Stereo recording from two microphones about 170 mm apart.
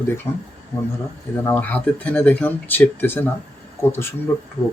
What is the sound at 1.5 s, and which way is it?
Speech, 10° left (ahead or behind).